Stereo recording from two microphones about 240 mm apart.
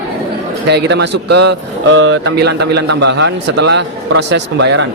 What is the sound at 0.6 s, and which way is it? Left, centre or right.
Speech, right.